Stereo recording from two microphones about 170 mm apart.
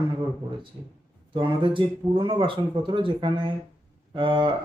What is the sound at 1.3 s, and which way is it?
Speech, 30° right (ahead or behind).